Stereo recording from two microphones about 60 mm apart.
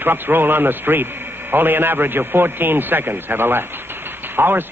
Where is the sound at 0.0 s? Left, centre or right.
Right.